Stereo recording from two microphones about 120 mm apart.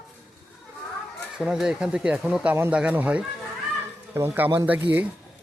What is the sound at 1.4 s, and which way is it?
Speech, 5° right (ahead or behind).